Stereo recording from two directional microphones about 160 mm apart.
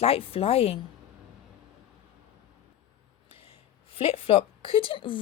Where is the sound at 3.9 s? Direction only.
35° left (ahead or behind).